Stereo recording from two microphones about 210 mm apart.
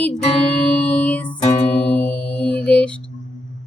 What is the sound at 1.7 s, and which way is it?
Singing bowl, 5° left (ahead or behind).